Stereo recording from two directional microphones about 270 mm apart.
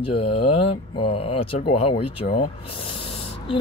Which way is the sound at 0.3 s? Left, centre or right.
Centre.